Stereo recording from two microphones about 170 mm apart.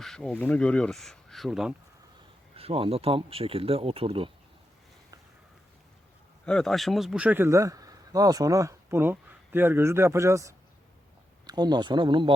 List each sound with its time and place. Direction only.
0.0 s speech: 5° left (ahead or behind)
2.6 s speech: 35° right (ahead or behind)
6.4 s speech: 5° left (ahead or behind); by 12.3 s 30° right (ahead or behind)